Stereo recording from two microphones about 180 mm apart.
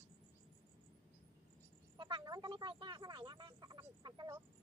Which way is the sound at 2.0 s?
25° right (ahead or behind).